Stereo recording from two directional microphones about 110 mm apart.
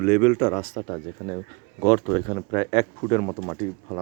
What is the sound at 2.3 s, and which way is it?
Speech, 40° left (ahead or behind).